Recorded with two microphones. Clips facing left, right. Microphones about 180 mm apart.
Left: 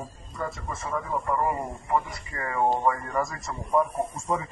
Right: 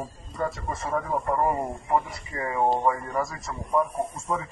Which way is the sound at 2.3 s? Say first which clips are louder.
Right 2 dB; 15° right (ahead or behind).